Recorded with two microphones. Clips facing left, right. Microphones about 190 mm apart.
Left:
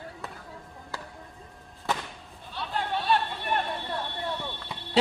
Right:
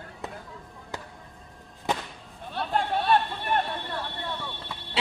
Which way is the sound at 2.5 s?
55° right (ahead or behind).